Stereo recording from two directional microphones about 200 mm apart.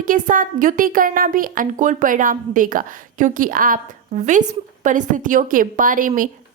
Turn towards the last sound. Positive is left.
turn(degrees=-40)  # may be behind; listen again after turning